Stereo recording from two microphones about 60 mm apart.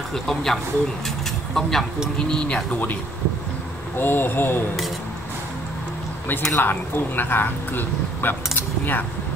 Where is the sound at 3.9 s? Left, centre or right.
Left.